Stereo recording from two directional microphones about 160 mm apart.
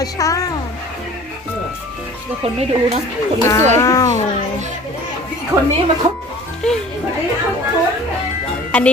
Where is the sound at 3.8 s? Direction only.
20° left (ahead or behind).